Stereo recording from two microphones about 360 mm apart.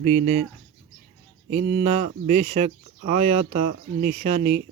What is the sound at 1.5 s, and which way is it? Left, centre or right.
Speech, centre.